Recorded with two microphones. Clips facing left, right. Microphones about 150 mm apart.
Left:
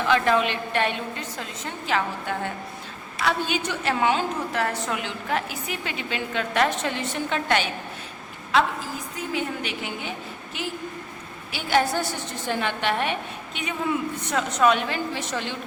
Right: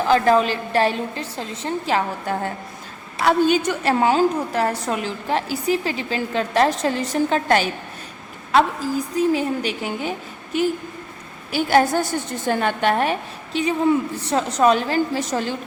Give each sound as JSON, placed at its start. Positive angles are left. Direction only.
{"t": 0.0, "sound": "a woman's voice", "side_deg": -35}
{"t": 11.5, "sound": "a woman's voice", "side_deg": -45}